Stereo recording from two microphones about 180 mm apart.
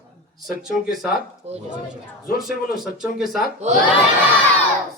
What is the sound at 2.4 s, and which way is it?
Speech, centre (ahead or behind).